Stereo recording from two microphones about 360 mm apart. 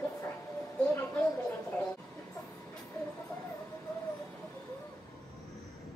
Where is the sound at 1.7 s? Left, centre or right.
Centre.